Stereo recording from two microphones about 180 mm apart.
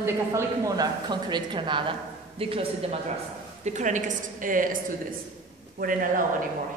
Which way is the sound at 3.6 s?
40° right (ahead or behind).